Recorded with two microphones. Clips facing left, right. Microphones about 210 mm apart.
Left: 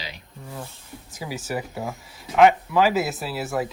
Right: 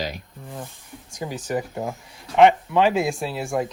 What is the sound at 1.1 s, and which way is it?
Speech, 5° left (ahead or behind).